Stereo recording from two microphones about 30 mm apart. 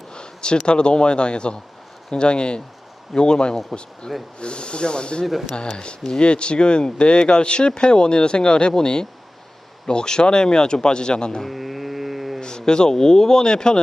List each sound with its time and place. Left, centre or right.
0.1 s speech: left
3.7 s speech: centre
4.4 s speech: left
11.4 s mantra: centre
12.4 s speech: left